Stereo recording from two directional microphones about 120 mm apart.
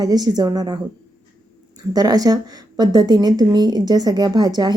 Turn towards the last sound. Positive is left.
turn(degrees=-35)  # may be behind; listen again after turning